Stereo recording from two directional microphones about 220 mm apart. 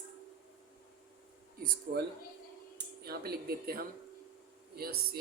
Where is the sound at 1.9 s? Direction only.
40° right (ahead or behind).